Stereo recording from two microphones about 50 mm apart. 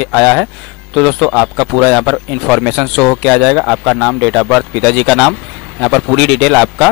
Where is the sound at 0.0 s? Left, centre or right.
Centre.